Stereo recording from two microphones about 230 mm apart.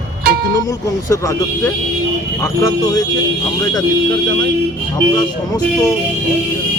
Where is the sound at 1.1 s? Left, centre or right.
Centre.